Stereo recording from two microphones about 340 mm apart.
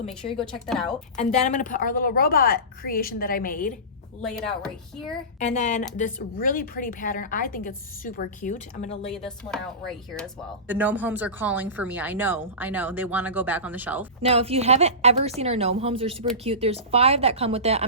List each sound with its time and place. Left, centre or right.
0.3 s speech: centre
1.1 s speech: centre
4.2 s speech: centre
5.4 s speech: left
9.2 s speech: centre
14.2 s speech: centre